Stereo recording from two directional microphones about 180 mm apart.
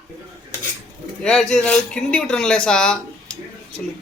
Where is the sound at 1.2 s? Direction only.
5° left (ahead or behind).